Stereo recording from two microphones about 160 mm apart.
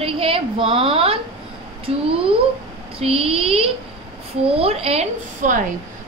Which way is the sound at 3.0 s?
40° right (ahead or behind).